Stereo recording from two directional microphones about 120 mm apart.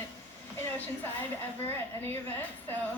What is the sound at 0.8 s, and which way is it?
A woman's voice, 15° left (ahead or behind).